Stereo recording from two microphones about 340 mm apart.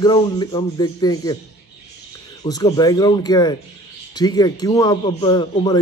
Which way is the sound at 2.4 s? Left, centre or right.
Centre.